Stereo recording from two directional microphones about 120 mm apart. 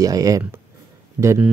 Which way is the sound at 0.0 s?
30° right (ahead or behind).